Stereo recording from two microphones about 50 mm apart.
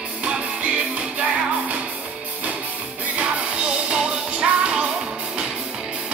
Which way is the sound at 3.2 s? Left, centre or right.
Centre.